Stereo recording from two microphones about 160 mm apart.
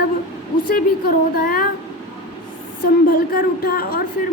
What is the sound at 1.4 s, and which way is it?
Music, 65° left (ahead or behind).